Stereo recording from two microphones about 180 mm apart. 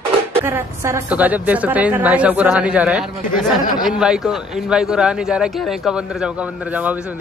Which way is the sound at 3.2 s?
45° left (ahead or behind).